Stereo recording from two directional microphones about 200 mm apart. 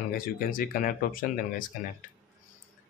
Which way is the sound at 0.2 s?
45° left (ahead or behind).